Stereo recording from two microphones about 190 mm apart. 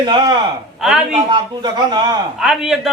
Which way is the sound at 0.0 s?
25° right (ahead or behind).